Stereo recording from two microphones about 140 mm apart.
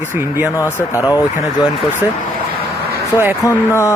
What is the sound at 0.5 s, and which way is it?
Speech, 20° left (ahead or behind).